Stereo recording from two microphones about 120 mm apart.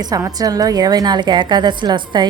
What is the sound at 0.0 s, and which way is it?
A woman's voice, 30° right (ahead or behind).